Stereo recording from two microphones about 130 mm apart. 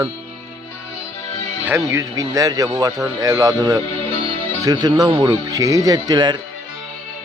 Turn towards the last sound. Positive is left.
turn(degrees=-35)  # may be behind; listen again after turning